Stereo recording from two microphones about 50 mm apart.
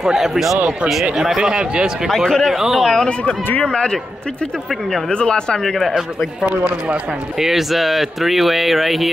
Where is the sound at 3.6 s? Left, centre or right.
Centre.